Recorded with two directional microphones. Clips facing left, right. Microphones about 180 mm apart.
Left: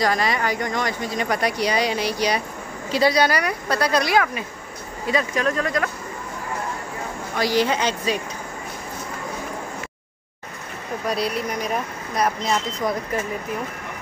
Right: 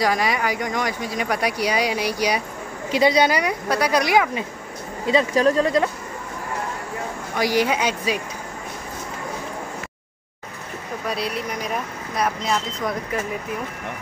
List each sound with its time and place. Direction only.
0.0 s speech: 10° right (ahead or behind)
5.3 s speech: 35° right (ahead or behind)
7.3 s speech: 10° right (ahead or behind)
11.1 s speech: centre (ahead or behind)